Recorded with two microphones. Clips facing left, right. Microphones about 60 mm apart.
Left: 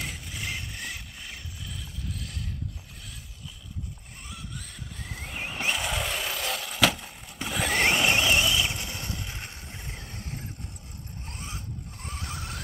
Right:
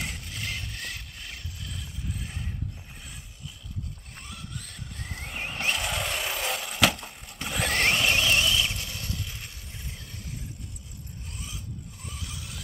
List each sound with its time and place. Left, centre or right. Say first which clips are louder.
0.0 s vehicle: even; centre
2.0 s mechanisms: right 1 dB; centre
4.3 s vehicle: left 1 dB; centre
7.9 s vehicle: left 1 dB; centre; by 12.5 s left